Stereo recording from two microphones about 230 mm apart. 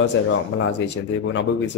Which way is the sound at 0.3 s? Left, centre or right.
Left.